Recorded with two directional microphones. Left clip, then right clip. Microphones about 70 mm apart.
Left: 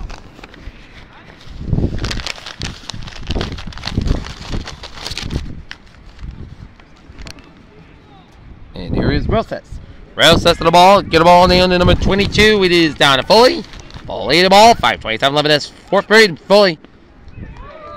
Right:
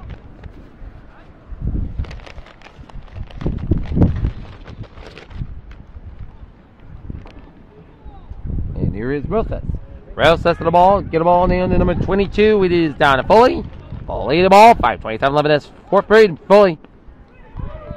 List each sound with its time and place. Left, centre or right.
9.0 s a sound: centre
10.1 s speech: right
10.7 s speech: left
11.5 s speech: left
12.1 s speech: centre